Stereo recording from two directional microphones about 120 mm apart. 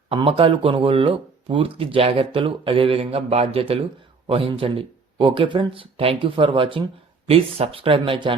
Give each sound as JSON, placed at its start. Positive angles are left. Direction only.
{"t": 0.1, "sound": "speech", "side_deg": -50}